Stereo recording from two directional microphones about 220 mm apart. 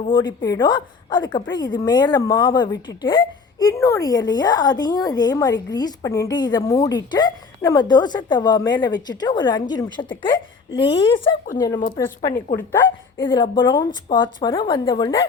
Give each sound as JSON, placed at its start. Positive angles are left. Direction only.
{"t": 0.0, "sound": "a woman's voice", "side_deg": 20}
{"t": 13.1, "sound": "a woman's voice", "side_deg": 20}